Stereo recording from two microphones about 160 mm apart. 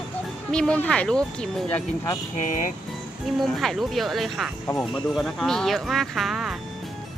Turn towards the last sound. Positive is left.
turn(degrees=0)  # may be behind; listen again after turning